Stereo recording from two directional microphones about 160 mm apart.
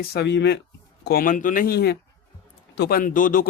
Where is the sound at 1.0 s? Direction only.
65° left (ahead or behind); by 2.0 s 90° left.